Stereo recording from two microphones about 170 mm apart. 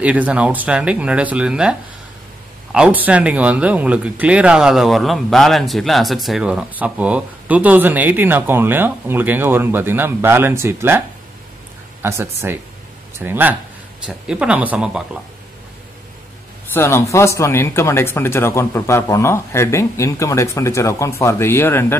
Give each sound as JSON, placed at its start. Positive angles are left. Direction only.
{"t": 0.0, "sound": "speech", "side_deg": -10}
{"t": 12.0, "sound": "speech", "side_deg": -15}
{"t": 16.7, "sound": "speech", "side_deg": 15}